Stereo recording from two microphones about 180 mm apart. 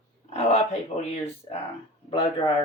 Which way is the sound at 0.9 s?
35° left (ahead or behind).